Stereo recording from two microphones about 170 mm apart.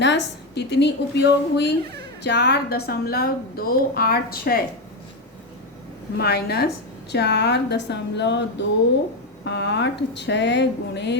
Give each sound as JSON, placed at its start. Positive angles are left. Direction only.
{"t": 0.0, "sound": "a woman's voice", "side_deg": 90}
{"t": 6.1, "sound": "a woman's voice", "side_deg": 70}
{"t": 7.1, "sound": "speech", "side_deg": 85}